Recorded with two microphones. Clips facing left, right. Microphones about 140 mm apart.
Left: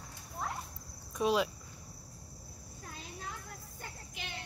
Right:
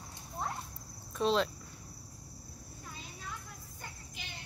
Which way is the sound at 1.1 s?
10° left (ahead or behind).